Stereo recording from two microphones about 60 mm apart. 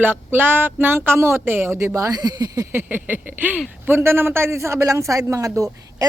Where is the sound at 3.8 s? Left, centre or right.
Right.